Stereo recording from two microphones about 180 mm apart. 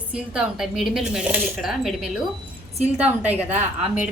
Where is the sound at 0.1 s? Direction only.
5° right (ahead or behind).